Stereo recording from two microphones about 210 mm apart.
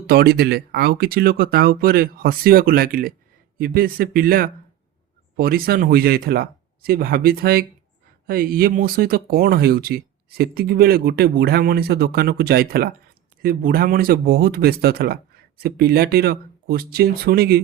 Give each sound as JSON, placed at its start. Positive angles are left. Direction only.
{"t": 0.1, "sound": "speech", "side_deg": -50}